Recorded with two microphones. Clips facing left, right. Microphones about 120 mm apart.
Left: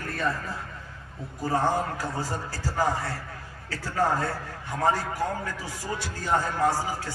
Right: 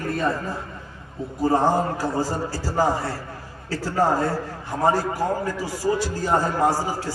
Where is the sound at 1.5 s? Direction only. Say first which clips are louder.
Right 4 dB; 40° right (ahead or behind).